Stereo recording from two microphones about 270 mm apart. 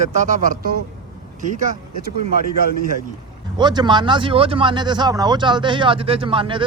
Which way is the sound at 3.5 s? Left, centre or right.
Centre.